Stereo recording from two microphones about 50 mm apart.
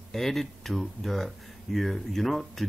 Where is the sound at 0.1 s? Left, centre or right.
Centre.